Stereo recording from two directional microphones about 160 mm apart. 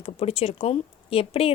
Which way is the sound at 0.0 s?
40° left (ahead or behind).